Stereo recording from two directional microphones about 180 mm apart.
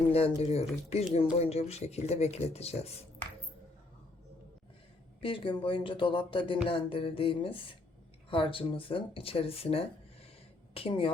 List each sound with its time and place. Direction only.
0.1 s speech: 35° left (ahead or behind)
5.2 s speech: 30° left (ahead or behind)